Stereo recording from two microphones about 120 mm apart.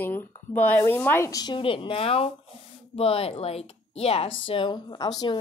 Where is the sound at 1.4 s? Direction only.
45° left (ahead or behind).